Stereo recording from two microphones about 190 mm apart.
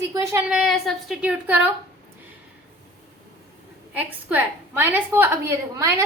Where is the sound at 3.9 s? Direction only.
10° right (ahead or behind).